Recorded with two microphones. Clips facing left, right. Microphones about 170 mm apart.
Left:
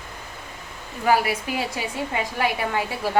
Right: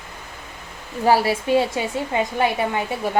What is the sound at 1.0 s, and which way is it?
A woman's voice, 30° right (ahead or behind).